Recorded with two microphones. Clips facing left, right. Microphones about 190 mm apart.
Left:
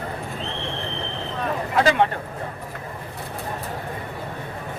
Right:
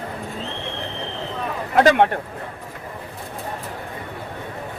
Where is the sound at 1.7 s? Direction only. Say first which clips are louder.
Right 4 dB; 55° right (ahead or behind).